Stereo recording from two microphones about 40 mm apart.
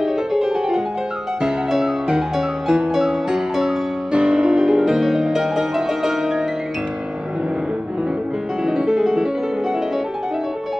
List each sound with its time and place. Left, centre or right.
0.0 s music: centre
4.1 s music: right; by 6.4 s centre
8.6 s music: centre